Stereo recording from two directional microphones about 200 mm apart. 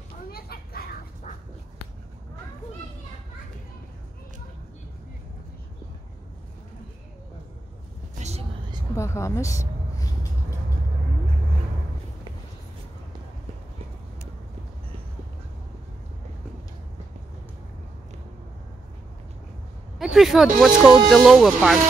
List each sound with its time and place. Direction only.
0.3 s children playing: 50° left (ahead or behind)
8.2 s vehicle: 35° right (ahead or behind)
8.9 s a woman's voice: 15° left (ahead or behind)
20.0 s speech: centre (ahead or behind)